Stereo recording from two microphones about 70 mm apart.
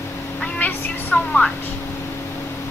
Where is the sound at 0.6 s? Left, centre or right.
Left.